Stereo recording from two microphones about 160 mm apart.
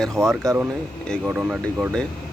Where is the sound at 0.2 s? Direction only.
20° right (ahead or behind).